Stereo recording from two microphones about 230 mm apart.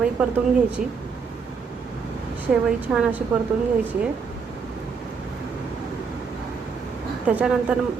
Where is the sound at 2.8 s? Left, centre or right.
Centre.